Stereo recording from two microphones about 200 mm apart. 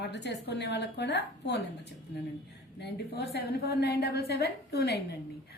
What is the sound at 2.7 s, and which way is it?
A woman's voice, 55° left (ahead or behind).